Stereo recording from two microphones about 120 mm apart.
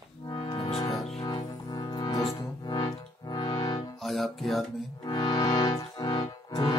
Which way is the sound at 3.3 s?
35° left (ahead or behind).